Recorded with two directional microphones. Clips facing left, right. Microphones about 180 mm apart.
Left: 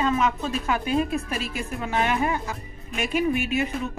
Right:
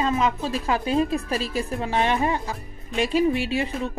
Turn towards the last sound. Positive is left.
turn(degrees=-30)  # may be behind; listen again after turning